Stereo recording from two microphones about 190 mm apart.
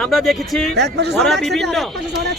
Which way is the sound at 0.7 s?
65° right (ahead or behind).